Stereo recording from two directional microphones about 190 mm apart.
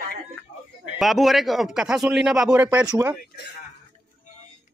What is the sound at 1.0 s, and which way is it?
Speech, centre (ahead or behind).